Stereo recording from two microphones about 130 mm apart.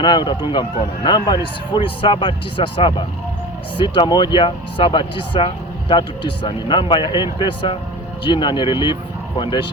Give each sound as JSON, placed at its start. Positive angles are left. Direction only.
{"t": 0.0, "sound": "a man's voice", "side_deg": 35}